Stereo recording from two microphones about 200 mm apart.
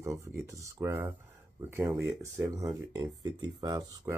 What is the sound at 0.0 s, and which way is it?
Speech, 15° right (ahead or behind).